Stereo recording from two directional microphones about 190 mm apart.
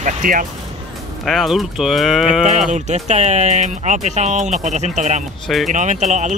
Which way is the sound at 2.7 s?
35° right (ahead or behind).